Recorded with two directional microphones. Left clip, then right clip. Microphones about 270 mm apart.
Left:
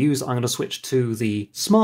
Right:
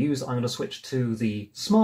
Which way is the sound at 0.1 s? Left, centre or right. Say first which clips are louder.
Left 4 dB; left.